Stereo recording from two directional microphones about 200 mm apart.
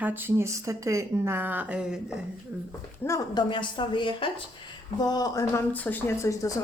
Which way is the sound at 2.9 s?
15° left (ahead or behind).